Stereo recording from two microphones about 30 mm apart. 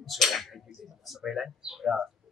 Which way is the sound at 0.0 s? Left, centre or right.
Centre.